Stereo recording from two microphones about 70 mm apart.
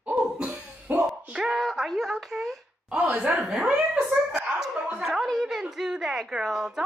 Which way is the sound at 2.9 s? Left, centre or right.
Right.